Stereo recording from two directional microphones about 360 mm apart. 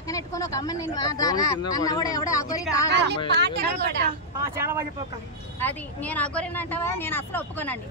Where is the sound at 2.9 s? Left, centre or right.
Right.